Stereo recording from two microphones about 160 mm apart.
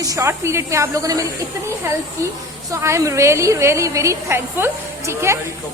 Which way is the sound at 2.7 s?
20° right (ahead or behind).